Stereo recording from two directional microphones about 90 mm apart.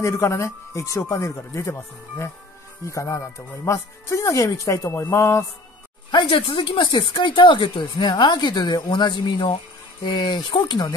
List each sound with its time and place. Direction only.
0.0 s speech: 35° left (ahead or behind)
6.1 s speech: 70° left (ahead or behind)